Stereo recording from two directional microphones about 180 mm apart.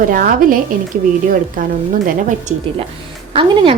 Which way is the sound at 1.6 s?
50° right (ahead or behind).